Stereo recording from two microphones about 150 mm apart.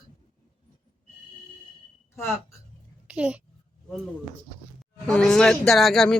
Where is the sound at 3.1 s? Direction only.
5° right (ahead or behind).